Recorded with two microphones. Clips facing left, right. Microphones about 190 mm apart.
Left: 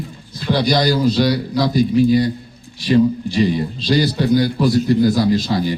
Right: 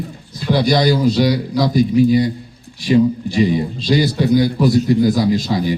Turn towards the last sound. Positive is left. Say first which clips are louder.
# even
turn(degrees=-5)  # may be behind; listen again after turning